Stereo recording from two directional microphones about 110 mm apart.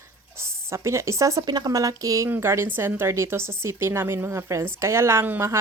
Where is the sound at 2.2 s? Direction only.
20° right (ahead or behind).